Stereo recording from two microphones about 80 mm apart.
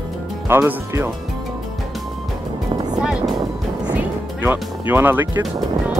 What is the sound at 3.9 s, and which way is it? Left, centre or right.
Music, right.